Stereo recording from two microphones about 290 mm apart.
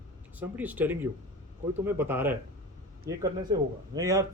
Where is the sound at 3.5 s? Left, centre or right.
Centre.